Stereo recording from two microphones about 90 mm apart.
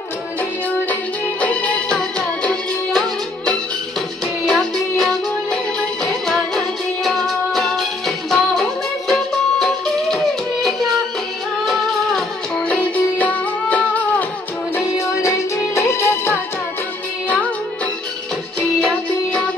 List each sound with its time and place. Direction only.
1.4 s music: 15° left (ahead or behind)
4.5 s music: 10° left (ahead or behind)
12.7 s music: 15° left (ahead or behind)
15.0 s music: 30° left (ahead or behind)